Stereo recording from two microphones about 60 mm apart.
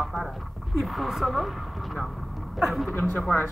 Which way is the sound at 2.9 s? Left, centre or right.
Left.